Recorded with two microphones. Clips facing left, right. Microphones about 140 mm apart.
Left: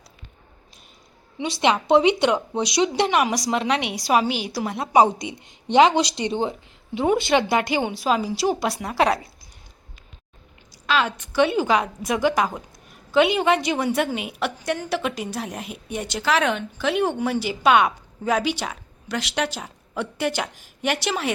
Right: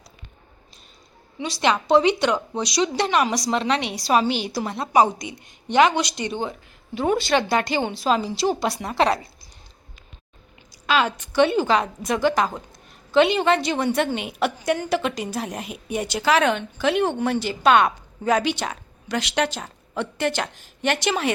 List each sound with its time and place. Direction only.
1.4 s a woman's voice: 20° left (ahead or behind)
5.0 s a woman's voice: 25° left (ahead or behind); by 9.2 s 10° left (ahead or behind)
10.8 s a woman's voice: centre (ahead or behind)